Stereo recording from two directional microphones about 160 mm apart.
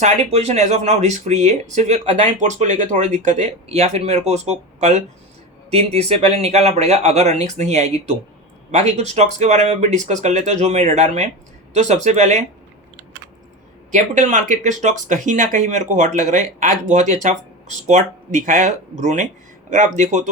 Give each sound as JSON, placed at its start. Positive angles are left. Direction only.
{"t": 0.0, "sound": "speech", "side_deg": -40}
{"t": 13.9, "sound": "speech", "side_deg": -50}